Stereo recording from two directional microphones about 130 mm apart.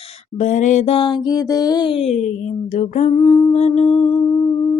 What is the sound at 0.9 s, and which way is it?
Music, 40° left (ahead or behind).